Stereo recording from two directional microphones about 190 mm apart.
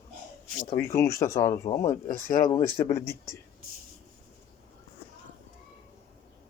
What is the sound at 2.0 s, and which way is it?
Speech, 45° left (ahead or behind).